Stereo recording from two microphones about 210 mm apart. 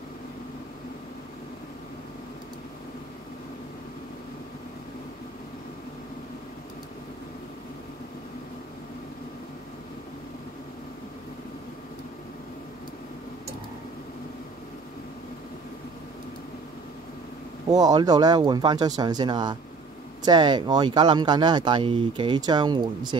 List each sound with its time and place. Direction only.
17.6 s speech: 15° right (ahead or behind)